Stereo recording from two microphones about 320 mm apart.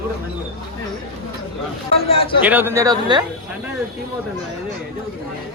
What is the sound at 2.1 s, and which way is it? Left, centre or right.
Speech, centre.